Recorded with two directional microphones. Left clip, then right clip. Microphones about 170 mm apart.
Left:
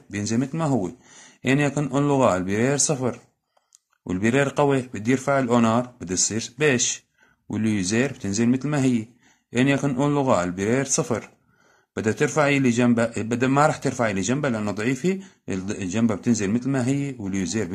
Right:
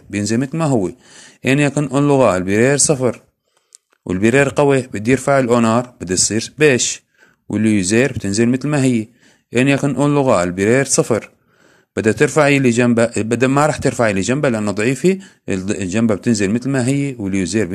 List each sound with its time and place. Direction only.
0.1 s a man's voice: 30° right (ahead or behind)